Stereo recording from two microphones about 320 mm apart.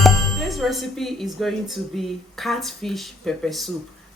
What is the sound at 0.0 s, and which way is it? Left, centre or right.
Speech, centre.